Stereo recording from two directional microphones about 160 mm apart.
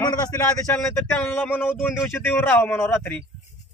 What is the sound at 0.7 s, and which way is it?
A man's voice, 15° left (ahead or behind).